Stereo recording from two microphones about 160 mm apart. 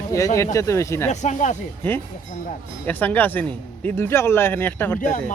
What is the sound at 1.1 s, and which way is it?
Speech, 50° left (ahead or behind).